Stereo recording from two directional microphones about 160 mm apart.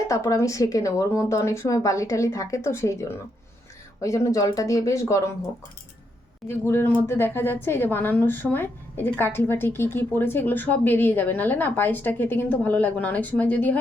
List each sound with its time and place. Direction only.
0.1 s speech: 20° left (ahead or behind)
6.5 s a woman's voice: 15° left (ahead or behind)